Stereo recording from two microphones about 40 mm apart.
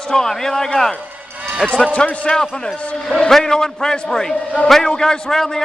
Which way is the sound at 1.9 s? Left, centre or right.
Left.